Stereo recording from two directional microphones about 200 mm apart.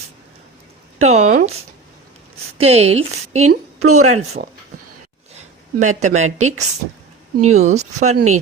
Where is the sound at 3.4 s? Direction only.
90° right.